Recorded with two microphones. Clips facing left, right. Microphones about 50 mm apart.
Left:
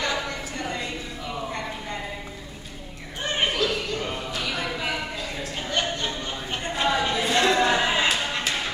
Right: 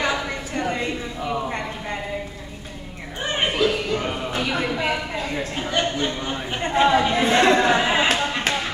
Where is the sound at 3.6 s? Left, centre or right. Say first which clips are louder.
Right 5 dB; right.